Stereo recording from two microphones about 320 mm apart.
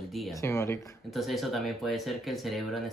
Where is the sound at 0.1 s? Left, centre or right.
Centre.